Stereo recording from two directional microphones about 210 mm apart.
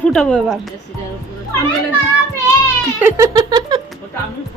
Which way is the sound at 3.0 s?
10° right (ahead or behind).